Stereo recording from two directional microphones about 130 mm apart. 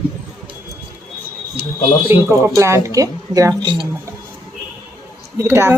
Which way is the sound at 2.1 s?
20° right (ahead or behind).